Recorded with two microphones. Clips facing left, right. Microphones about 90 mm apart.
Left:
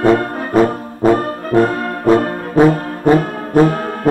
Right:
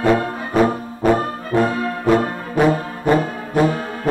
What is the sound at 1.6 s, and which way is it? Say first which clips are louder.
Brass instrument: left 4 dB; 45° left (ahead or behind).